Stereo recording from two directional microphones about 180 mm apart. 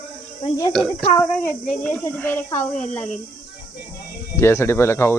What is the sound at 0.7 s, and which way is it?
A child's voice, centre (ahead or behind).